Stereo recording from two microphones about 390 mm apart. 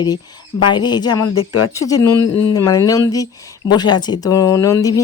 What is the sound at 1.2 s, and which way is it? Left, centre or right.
Speech, left.